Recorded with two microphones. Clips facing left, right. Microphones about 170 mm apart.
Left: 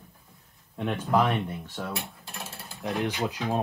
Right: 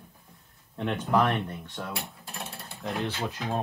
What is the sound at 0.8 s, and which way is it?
Cutlery, 5° left (ahead or behind).